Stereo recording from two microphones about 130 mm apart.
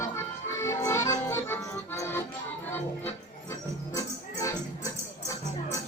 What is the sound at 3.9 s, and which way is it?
Music, 25° left (ahead or behind).